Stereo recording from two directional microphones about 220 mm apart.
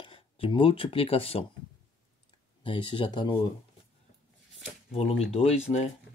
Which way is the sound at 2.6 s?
25° left (ahead or behind).